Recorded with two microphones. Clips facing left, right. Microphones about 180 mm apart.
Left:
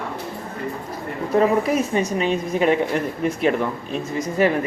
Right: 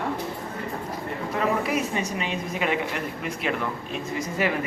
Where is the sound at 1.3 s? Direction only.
40° left (ahead or behind).